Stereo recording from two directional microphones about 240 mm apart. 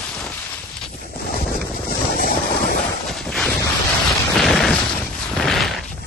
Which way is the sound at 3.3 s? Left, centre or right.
Centre.